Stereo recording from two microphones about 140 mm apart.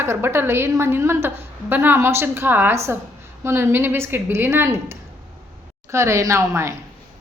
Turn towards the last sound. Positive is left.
turn(degrees=-20)  # may be behind; listen again after turning